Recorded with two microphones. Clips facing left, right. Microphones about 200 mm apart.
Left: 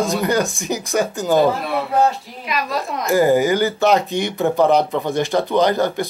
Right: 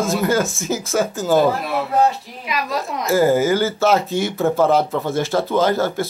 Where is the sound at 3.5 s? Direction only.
15° left (ahead or behind).